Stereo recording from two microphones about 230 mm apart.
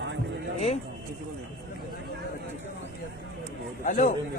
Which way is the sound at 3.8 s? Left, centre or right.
Left.